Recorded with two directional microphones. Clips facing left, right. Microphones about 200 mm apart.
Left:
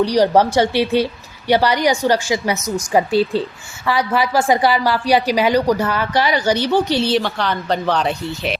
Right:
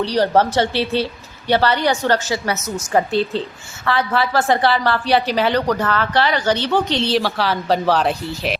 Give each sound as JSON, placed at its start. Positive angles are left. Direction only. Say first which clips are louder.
{"t": 0.0, "sound": "a woman's voice", "louder": "left 3 dB", "side_deg": 15}